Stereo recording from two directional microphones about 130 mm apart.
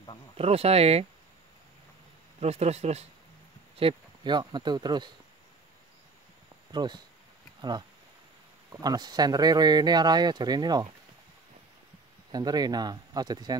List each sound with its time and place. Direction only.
0.4 s speech: 50° right (ahead or behind)
2.4 s speech: 55° right (ahead or behind)
3.7 s speech: 40° right (ahead or behind)
6.7 s speech: 35° right (ahead or behind)
8.8 s speech: 30° right (ahead or behind)
12.3 s speech: 30° right (ahead or behind)